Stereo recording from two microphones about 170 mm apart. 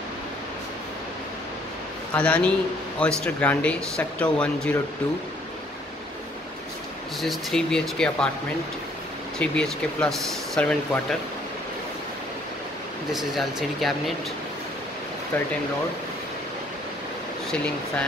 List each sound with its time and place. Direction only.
2.1 s speech: 5° left (ahead or behind)
7.2 s speech: centre (ahead or behind)
9.4 s speech: 5° left (ahead or behind)
13.1 s speech: centre (ahead or behind)
15.3 s speech: 10° left (ahead or behind)